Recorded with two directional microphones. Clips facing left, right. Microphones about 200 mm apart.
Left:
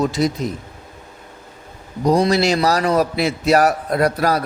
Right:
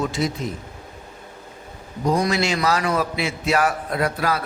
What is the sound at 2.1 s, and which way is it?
A man's voice, 35° left (ahead or behind).